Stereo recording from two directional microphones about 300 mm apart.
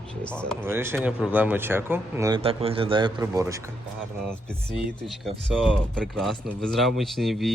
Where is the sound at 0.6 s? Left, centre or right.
Centre.